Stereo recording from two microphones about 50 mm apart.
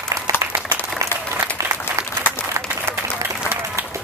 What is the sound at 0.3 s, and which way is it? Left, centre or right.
Applause, right.